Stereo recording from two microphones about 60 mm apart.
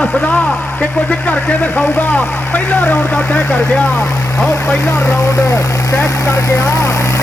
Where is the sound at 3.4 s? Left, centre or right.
Centre.